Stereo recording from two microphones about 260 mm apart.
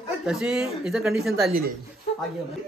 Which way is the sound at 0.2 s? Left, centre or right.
Centre.